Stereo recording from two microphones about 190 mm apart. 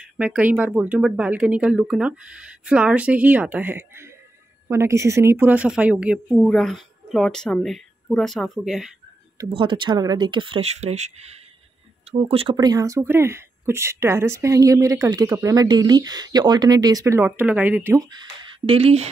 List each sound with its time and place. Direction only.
0.0 s a woman's voice: 5° right (ahead or behind)
9.4 s speech: 25° right (ahead or behind); by 18.0 s 10° right (ahead or behind)
18.7 s speech: 30° right (ahead or behind)